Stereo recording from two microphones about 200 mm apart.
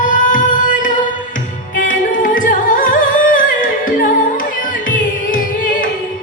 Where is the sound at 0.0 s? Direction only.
40° left (ahead or behind).